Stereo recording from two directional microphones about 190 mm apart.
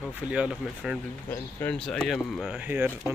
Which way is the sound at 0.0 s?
5° right (ahead or behind).